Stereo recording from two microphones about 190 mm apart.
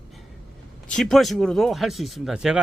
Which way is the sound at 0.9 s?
Centre (ahead or behind).